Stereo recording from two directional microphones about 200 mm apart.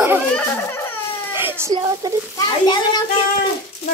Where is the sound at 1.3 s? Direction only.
10° right (ahead or behind).